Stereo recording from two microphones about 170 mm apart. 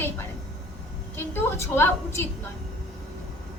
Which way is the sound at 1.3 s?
15° left (ahead or behind).